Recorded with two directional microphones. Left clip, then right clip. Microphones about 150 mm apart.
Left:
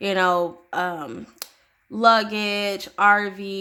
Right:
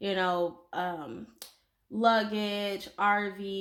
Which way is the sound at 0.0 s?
40° left (ahead or behind).